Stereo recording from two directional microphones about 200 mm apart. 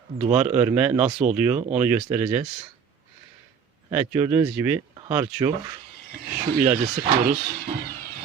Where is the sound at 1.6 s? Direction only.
35° right (ahead or behind).